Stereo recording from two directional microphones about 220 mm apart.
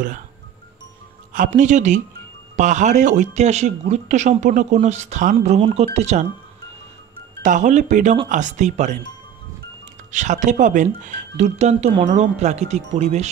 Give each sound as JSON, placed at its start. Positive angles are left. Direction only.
{"t": 1.3, "sound": "speech", "side_deg": -35}
{"t": 7.4, "sound": "speech", "side_deg": -35}
{"t": 10.1, "sound": "speech", "side_deg": -35}